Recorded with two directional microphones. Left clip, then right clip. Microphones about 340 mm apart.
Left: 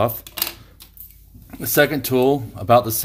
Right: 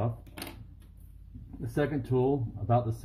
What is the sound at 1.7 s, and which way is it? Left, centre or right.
Speech, left.